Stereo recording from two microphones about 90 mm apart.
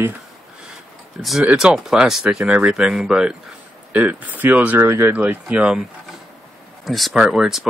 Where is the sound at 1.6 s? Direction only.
5° right (ahead or behind).